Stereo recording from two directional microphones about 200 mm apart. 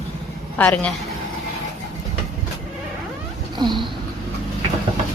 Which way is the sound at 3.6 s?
20° right (ahead or behind).